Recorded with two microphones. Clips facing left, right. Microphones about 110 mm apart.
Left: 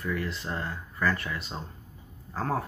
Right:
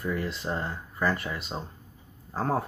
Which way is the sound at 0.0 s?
20° right (ahead or behind).